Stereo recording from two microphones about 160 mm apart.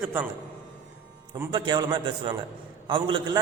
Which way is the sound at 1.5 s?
30° right (ahead or behind).